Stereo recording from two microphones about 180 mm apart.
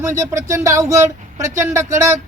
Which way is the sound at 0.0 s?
15° right (ahead or behind).